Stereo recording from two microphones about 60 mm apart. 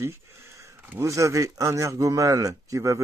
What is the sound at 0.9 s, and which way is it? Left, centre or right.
Speech, right.